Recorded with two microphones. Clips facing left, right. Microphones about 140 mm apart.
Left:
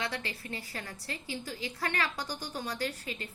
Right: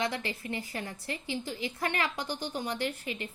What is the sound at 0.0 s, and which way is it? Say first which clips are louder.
A woman's voice: right 4 dB; 20° right (ahead or behind).